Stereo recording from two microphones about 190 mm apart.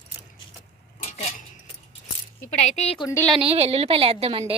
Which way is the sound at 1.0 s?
35° left (ahead or behind).